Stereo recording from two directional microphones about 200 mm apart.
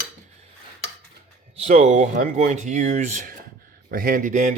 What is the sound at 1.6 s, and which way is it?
Speech, 35° right (ahead or behind).